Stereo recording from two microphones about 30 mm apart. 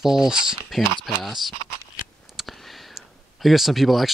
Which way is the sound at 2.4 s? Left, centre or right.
Centre.